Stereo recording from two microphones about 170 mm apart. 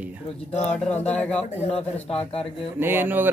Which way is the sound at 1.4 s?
40° left (ahead or behind).